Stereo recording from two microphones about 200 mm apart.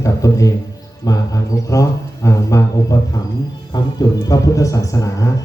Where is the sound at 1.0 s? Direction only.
20° left (ahead or behind).